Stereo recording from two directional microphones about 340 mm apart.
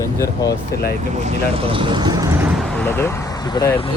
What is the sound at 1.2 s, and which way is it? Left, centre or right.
Speech, centre.